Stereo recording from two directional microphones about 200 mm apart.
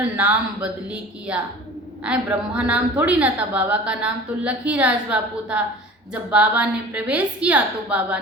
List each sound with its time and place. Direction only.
0.2 s a woman's voice: 5° right (ahead or behind)